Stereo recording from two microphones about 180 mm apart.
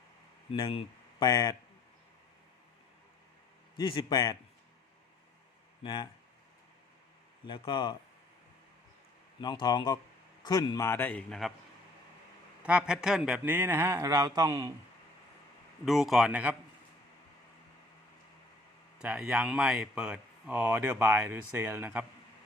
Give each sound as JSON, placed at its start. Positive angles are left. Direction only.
{"t": 0.5, "sound": "speech", "side_deg": 30}
{"t": 3.8, "sound": "speech", "side_deg": 25}
{"t": 5.8, "sound": "speech", "side_deg": 25}
{"t": 7.4, "sound": "speech", "side_deg": 25}
{"t": 9.4, "sound": "a man's voice", "side_deg": 25}
{"t": 12.6, "sound": "speech", "side_deg": -5}
{"t": 15.9, "sound": "speech", "side_deg": 0}
{"t": 18.9, "sound": "speech", "side_deg": -5}